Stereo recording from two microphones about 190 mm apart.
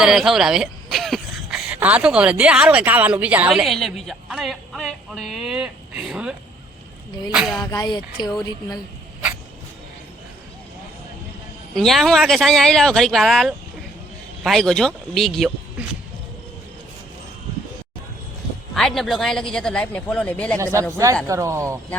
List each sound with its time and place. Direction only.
0.0 s speech: centre (ahead or behind)
7.3 s speech: centre (ahead or behind)
7.6 s speech: 20° left (ahead or behind)
11.7 s speech: centre (ahead or behind)
18.7 s speech: centre (ahead or behind)
21.2 s speech: 15° right (ahead or behind)